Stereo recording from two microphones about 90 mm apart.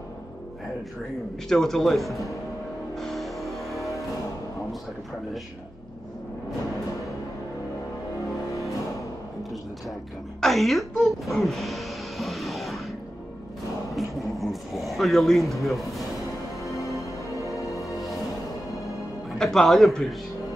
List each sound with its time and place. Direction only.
1.5 s speech: 5° left (ahead or behind)
3.0 s music: centre (ahead or behind)
9.4 s speech: centre (ahead or behind)
13.9 s speech: centre (ahead or behind)
16.8 s music: 35° left (ahead or behind)
17.7 s music: centre (ahead or behind)
18.8 s music: 35° left (ahead or behind)
19.3 s speech: 5° left (ahead or behind)